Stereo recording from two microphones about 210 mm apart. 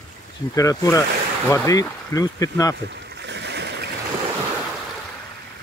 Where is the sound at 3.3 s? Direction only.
55° right (ahead or behind).